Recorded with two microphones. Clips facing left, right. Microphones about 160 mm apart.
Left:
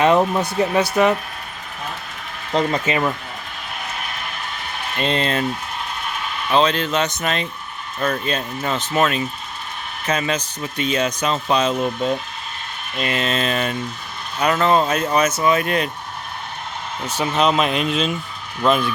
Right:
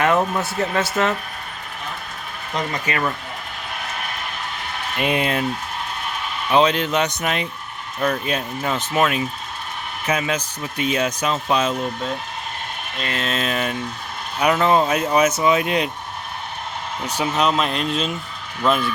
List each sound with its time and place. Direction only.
0.0 s speech: 15° left (ahead or behind)
2.5 s speech: 30° left (ahead or behind)
4.9 s speech: 10° right (ahead or behind)
6.5 s speech: 15° right (ahead or behind)
7.9 s speech: 5° right (ahead or behind)
13.0 s speech: 10° left (ahead or behind)
13.2 s speech: 5° right (ahead or behind)
17.1 s speech: 10° right (ahead or behind)
17.3 s speech: 5° left (ahead or behind)